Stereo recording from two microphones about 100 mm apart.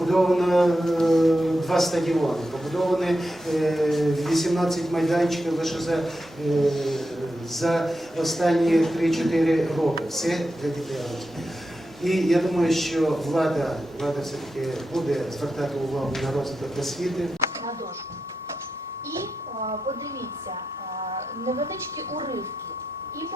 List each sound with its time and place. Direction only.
0.0 s speech: centre (ahead or behind)
12.0 s speech: centre (ahead or behind)
21.0 s a sound: 85° right